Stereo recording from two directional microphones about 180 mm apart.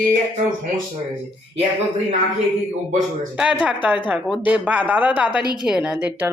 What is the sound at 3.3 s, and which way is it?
A woman's voice, 5° right (ahead or behind).